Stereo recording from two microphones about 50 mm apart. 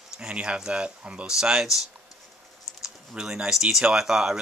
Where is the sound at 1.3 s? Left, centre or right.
Centre.